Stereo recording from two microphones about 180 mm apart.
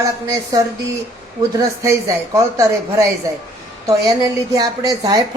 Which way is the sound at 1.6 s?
15° right (ahead or behind).